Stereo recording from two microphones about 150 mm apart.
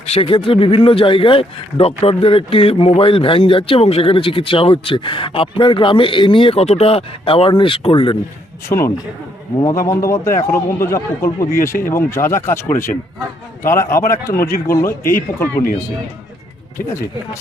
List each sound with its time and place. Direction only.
0.0 s speech: 40° left (ahead or behind)
8.7 s a man's voice: 20° left (ahead or behind)